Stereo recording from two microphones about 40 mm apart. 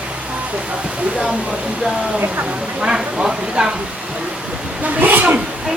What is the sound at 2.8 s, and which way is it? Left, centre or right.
Speech, right.